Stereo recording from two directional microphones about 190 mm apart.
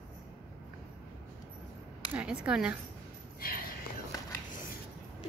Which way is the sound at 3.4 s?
50° left (ahead or behind).